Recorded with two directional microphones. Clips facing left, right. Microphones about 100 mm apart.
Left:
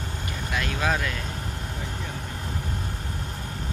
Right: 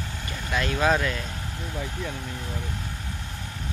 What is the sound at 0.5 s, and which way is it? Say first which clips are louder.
Speech: right 4 dB; 5° right (ahead or behind).